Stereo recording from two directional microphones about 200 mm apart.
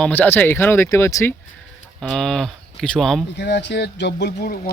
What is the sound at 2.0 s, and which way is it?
Speech, centre (ahead or behind).